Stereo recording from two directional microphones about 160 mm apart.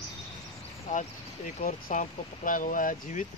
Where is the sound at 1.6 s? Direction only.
55° left (ahead or behind).